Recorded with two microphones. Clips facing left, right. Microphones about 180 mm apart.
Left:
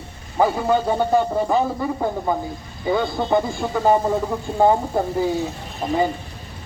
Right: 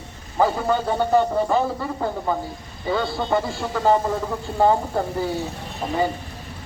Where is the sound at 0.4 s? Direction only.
15° left (ahead or behind).